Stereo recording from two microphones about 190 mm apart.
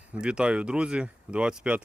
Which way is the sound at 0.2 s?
5° right (ahead or behind).